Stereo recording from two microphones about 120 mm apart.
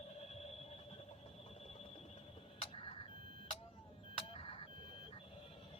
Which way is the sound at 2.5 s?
55° left (ahead or behind).